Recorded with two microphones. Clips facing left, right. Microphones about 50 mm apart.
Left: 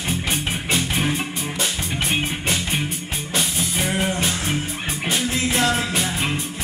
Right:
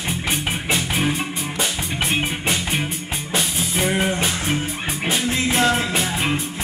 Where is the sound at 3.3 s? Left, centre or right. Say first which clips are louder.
Right 1 dB; centre.